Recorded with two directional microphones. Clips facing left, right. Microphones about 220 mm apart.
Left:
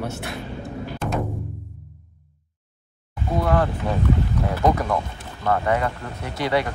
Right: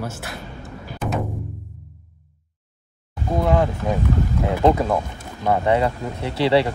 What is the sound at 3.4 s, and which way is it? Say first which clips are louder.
Speech: right 2 dB; 15° right (ahead or behind).